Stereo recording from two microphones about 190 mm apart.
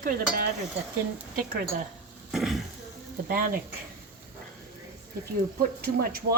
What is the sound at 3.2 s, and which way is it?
Speech, 50° right (ahead or behind).